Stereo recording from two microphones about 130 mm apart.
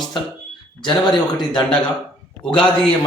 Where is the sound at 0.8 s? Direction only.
35° left (ahead or behind).